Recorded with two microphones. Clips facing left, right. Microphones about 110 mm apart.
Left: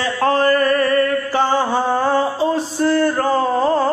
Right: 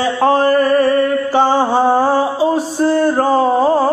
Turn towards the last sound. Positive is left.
turn(degrees=-15)  # may be behind; listen again after turning